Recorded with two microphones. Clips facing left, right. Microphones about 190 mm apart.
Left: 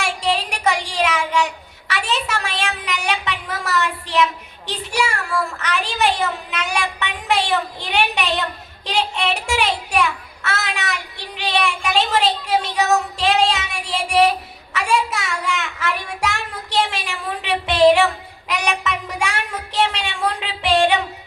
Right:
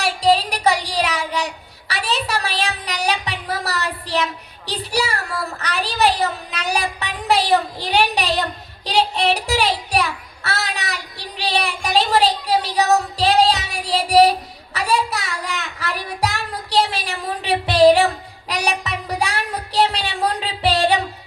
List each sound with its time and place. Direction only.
0.0 s child singing: 35° right (ahead or behind)